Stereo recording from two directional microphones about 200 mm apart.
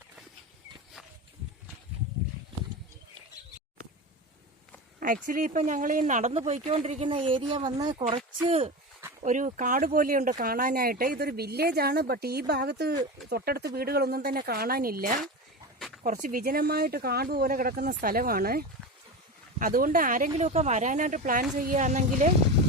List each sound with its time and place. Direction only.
4.9 s speech: 45° right (ahead or behind)